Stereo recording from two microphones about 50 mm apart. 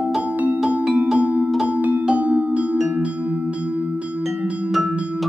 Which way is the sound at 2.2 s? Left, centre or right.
Right.